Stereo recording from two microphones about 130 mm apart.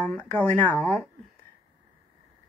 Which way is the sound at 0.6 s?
15° left (ahead or behind).